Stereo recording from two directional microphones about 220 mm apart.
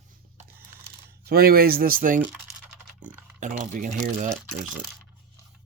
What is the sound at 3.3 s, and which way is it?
Speech, 35° right (ahead or behind).